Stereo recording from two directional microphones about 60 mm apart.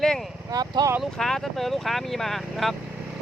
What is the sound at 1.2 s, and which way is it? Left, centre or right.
Speech, centre.